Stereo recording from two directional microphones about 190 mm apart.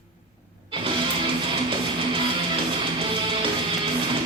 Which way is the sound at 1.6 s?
25° right (ahead or behind).